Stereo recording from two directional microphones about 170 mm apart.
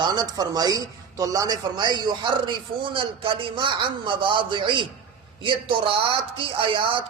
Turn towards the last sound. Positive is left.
turn(degrees=-30)  # may be behind; listen again after turning